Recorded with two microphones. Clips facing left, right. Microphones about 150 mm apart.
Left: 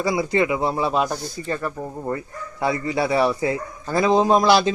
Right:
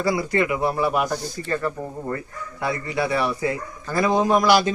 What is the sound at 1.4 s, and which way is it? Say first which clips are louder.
Speech: left 2 dB; 10° left (ahead or behind).